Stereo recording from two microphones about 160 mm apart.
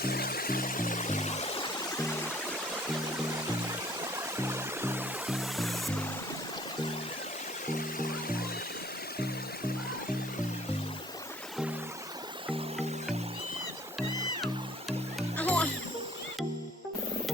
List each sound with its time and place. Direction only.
0.0 s music: 70° left (ahead or behind); by 1.6 s 45° left (ahead or behind)
4.4 s music: 15° right (ahead or behind)
5.4 s music: centre (ahead or behind)
7.9 s music: 65° left (ahead or behind)
15.4 s music: 10° left (ahead or behind)